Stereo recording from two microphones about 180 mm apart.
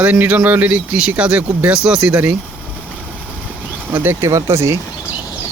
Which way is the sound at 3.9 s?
15° right (ahead or behind).